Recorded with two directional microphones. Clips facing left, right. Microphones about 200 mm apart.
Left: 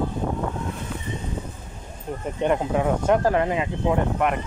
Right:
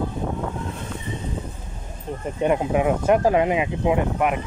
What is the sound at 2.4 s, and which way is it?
Speech, 10° right (ahead or behind).